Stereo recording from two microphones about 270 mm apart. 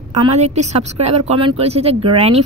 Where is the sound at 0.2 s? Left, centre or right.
Right.